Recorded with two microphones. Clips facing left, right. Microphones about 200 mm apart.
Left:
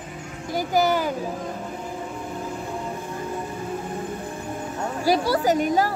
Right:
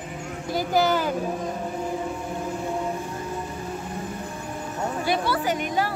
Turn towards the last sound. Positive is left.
turn(degrees=40)  # may be behind; listen again after turning